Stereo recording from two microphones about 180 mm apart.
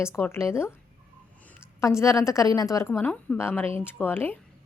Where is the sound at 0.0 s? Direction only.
15° left (ahead or behind).